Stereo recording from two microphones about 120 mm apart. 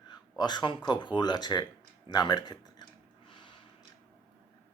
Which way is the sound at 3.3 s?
40° left (ahead or behind).